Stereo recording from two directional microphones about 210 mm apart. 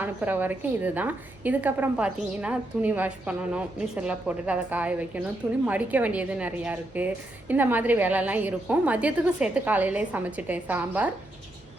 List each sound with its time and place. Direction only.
0.0 s a woman's voice: 10° right (ahead or behind)